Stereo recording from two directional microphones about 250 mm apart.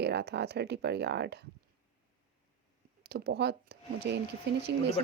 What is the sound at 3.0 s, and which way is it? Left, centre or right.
Speech, right.